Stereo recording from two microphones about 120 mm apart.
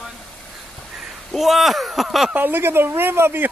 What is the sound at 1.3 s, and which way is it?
Speech, centre (ahead or behind).